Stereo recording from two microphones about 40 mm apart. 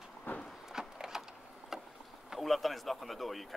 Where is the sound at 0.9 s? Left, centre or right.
Centre.